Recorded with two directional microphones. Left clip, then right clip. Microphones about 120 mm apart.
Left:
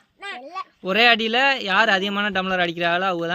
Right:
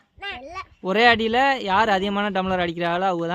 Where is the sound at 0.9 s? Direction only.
35° right (ahead or behind).